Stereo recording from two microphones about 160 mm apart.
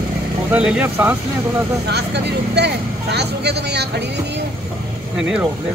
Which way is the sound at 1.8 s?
90° right.